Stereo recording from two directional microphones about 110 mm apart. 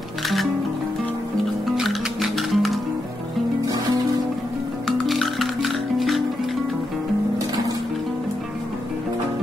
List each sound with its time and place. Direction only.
1.8 s music: centre (ahead or behind)
4.8 s music: centre (ahead or behind)